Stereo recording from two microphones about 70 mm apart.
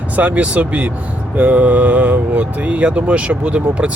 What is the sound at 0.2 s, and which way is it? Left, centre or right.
Speech, right.